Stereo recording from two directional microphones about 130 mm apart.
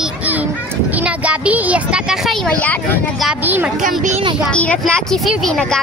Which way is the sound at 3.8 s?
75° right (ahead or behind).